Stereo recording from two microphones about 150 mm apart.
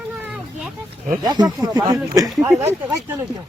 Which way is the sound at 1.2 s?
25° right (ahead or behind).